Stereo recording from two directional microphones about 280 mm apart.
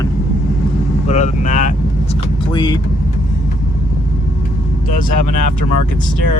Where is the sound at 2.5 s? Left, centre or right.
Centre.